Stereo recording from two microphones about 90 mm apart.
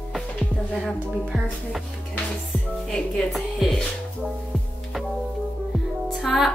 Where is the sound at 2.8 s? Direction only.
5° left (ahead or behind).